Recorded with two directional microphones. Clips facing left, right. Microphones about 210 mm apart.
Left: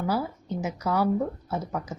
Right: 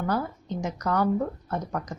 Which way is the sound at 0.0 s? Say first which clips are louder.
Even; 10° left (ahead or behind).